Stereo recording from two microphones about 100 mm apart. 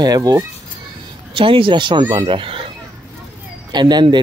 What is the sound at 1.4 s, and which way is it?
Speech, 60° right (ahead or behind).